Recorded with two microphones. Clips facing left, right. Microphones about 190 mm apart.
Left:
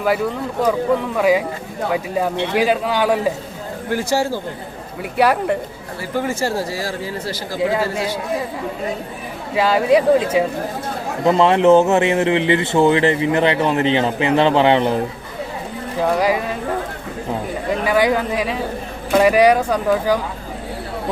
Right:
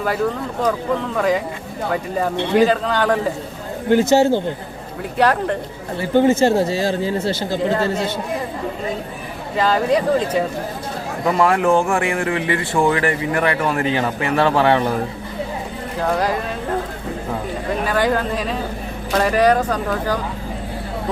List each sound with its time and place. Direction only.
0.6 s speech: 10° left (ahead or behind)
3.8 s speech: 20° right (ahead or behind)
5.1 s speech: 10° left (ahead or behind)
6.0 s speech: 25° right (ahead or behind)
7.7 s speech: 5° left (ahead or behind)
9.6 s speech: 10° left (ahead or behind)
11.3 s speech: 25° left (ahead or behind)
16.1 s speech: 10° left (ahead or behind)
17.8 s speech: 10° left (ahead or behind)